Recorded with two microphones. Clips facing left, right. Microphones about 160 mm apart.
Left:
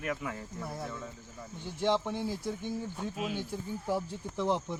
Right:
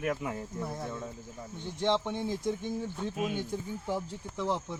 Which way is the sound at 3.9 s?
15° left (ahead or behind).